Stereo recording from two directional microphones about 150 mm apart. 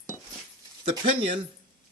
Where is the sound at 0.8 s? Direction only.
35° right (ahead or behind).